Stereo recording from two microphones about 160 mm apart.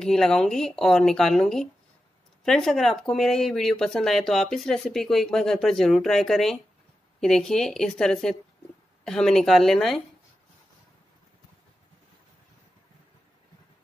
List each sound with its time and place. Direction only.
0.0 s speech: 5° left (ahead or behind)